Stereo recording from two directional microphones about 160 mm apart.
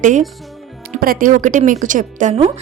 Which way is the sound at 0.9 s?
65° right (ahead or behind).